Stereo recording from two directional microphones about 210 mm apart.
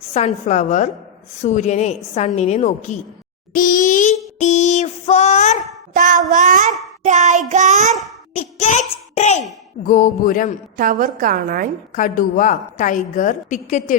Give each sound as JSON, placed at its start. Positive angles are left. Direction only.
{"t": 0.1, "sound": "a woman's voice", "side_deg": 30}
{"t": 5.9, "sound": "a woman's voice", "side_deg": -40}
{"t": 8.3, "sound": "a sound", "side_deg": 35}
{"t": 9.8, "sound": "a woman's voice", "side_deg": 40}
{"t": 10.8, "sound": "a woman's voice", "side_deg": -40}
{"t": 11.9, "sound": "a woman's voice", "side_deg": 40}